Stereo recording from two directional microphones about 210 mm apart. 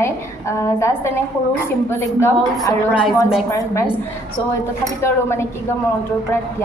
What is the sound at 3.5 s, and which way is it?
Speech, 15° left (ahead or behind).